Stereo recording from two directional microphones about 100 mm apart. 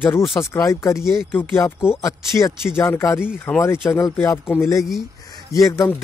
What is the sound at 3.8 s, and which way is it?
Speech, 30° left (ahead or behind).